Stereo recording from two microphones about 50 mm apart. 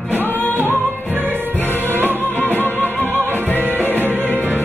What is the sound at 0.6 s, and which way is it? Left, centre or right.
Music, right.